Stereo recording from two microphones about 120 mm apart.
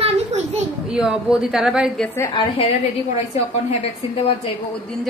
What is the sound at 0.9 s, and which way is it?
Speech, 5° right (ahead or behind).